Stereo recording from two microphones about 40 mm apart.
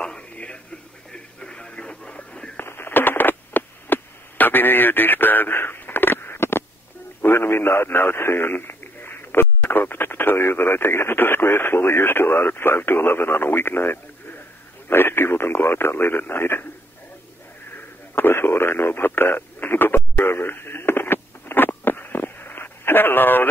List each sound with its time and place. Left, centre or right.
0.0 s a sound: left
1.1 s radio: left
2.6 s radio: left
5.5 s a sound: left
7.2 s speech: left
8.5 s a man's voice: left
18.1 s radio: left